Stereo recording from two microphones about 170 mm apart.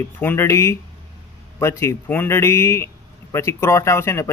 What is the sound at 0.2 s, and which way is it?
Speech, 15° left (ahead or behind).